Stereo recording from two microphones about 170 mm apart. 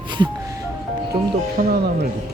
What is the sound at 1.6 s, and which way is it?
Speech, 70° right (ahead or behind).